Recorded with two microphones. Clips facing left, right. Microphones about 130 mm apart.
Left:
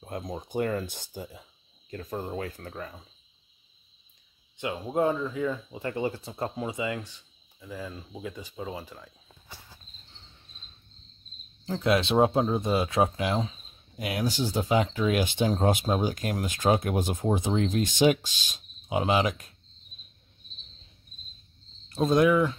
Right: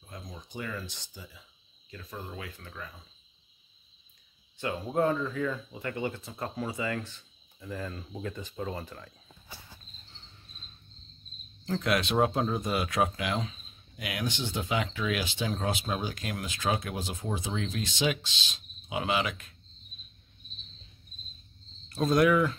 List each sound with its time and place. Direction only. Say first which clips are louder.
0.0 s speech: left 10 dB; 55° left (ahead or behind)
4.6 s speech: left 1 dB; 15° left (ahead or behind)
11.8 s speech: left 5 dB; 30° left (ahead or behind)
21.8 s speech: left 2 dB; 25° left (ahead or behind)